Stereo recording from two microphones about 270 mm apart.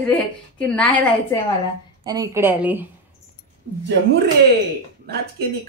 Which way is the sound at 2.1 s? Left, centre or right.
Centre.